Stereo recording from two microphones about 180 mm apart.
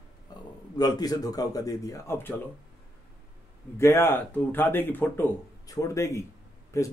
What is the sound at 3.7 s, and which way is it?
Speech, 15° left (ahead or behind).